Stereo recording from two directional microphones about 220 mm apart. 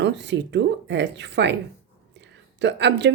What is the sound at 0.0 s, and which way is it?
Speech, 50° right (ahead or behind).